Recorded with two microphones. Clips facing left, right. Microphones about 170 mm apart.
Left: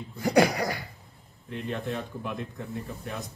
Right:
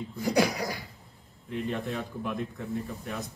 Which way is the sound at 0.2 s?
50° left (ahead or behind).